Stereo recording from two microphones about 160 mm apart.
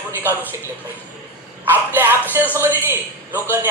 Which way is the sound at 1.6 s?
10° right (ahead or behind).